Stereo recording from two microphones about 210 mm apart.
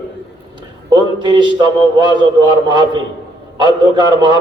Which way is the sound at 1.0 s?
20° right (ahead or behind).